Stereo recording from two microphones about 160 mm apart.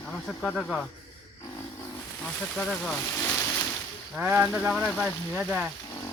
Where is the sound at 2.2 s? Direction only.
5° left (ahead or behind).